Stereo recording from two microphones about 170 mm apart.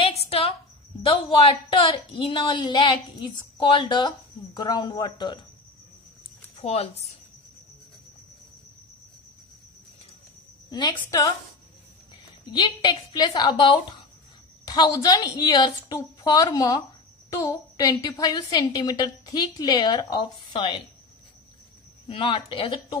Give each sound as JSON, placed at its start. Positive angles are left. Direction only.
{"t": 0.0, "sound": "a sound", "side_deg": 35}
{"t": 1.0, "sound": "a woman's voice", "side_deg": 30}
{"t": 6.6, "sound": "speech", "side_deg": 40}
{"t": 10.7, "sound": "a woman's voice", "side_deg": 25}
{"t": 12.4, "sound": "a woman's voice", "side_deg": 25}
{"t": 22.0, "sound": "speech", "side_deg": 30}